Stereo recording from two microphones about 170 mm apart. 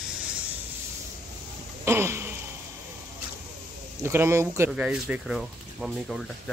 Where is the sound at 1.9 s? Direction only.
15° right (ahead or behind).